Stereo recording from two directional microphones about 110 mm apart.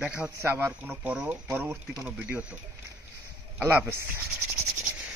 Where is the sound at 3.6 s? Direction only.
20° right (ahead or behind).